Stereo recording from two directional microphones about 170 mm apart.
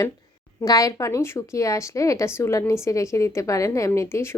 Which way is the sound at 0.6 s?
20° left (ahead or behind).